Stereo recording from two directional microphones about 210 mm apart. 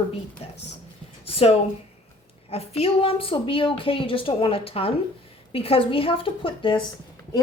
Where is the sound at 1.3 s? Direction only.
30° left (ahead or behind).